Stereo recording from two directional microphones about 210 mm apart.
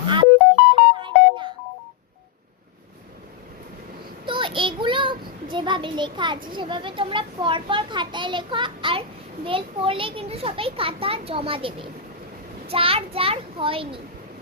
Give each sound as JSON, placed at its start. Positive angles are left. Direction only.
{"t": 0.0, "sound": "music", "side_deg": -20}
{"t": 4.3, "sound": "child singing", "side_deg": -25}
{"t": 6.5, "sound": "a child's voice", "side_deg": -25}